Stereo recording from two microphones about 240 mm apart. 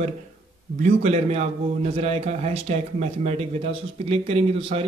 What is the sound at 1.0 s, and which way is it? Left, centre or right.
A man's voice, right.